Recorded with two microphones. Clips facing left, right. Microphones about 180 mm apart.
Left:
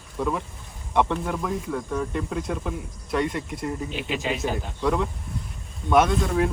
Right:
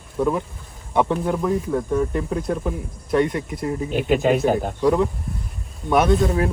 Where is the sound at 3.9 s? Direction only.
50° right (ahead or behind).